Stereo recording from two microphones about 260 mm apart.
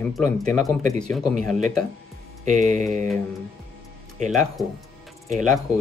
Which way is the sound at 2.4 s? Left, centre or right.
Right.